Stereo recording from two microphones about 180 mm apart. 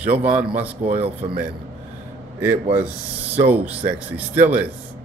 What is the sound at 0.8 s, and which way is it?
Speech, 35° right (ahead or behind).